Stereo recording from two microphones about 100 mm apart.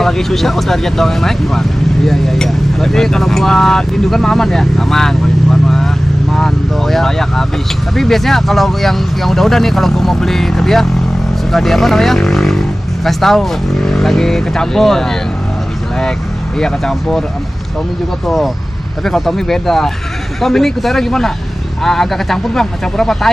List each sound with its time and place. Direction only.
0.0 s speech: 5° left (ahead or behind)
16.5 s speech: 5° left (ahead or behind)
18.2 s speech: centre (ahead or behind)